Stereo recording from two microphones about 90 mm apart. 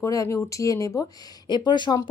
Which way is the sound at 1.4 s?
55° left (ahead or behind).